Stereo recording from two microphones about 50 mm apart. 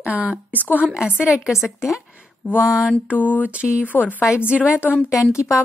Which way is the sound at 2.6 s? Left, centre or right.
Centre.